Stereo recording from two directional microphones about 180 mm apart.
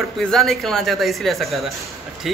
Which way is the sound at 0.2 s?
Centre (ahead or behind).